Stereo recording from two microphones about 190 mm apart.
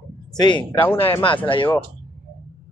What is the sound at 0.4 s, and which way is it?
Speech, 25° left (ahead or behind).